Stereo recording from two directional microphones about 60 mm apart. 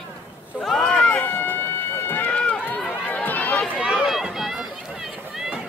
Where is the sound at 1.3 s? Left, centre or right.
Left.